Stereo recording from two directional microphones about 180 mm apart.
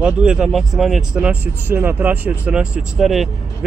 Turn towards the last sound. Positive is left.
turn(degrees=0)  # may be behind; listen again after turning